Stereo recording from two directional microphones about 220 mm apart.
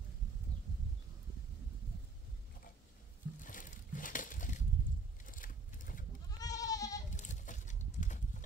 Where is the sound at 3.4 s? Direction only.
35° left (ahead or behind).